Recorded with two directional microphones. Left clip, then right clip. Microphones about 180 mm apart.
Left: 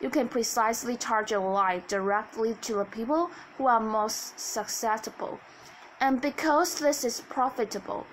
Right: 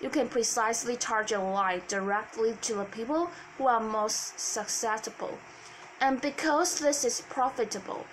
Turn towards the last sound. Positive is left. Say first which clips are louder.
# left 1 dB
turn(degrees=50)  # may be behind; listen again after turning